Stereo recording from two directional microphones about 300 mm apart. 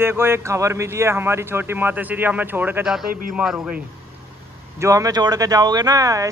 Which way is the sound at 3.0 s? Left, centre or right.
Right.